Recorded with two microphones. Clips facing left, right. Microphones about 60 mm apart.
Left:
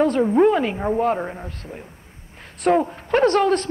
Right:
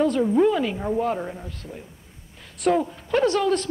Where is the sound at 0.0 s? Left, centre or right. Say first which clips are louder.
Left 3 dB; left.